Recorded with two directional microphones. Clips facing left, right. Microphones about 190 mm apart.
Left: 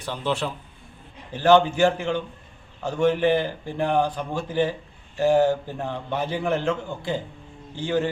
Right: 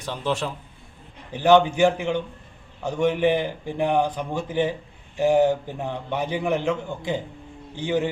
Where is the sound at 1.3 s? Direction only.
15° right (ahead or behind).